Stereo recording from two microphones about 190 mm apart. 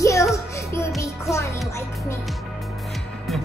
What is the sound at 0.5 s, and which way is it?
Music, 15° left (ahead or behind).